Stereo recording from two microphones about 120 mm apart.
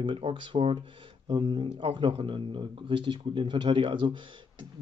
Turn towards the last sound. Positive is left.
turn(degrees=-40)  # may be behind; listen again after turning